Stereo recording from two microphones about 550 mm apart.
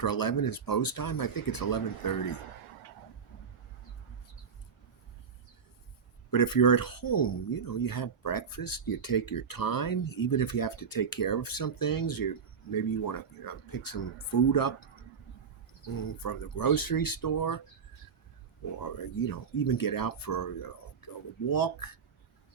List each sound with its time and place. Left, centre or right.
0.0 s speech: left
6.3 s speech: left
16.0 s speech: left
18.8 s speech: left